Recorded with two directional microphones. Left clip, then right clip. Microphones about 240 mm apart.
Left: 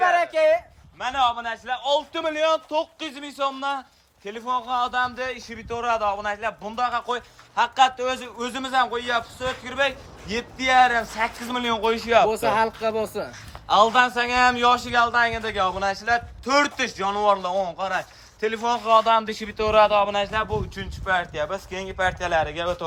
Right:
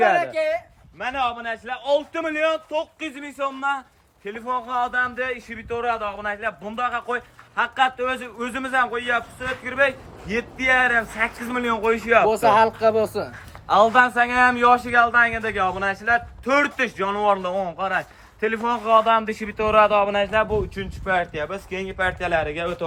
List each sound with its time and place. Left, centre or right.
0.3 s speech: left
0.9 s a man's voice: centre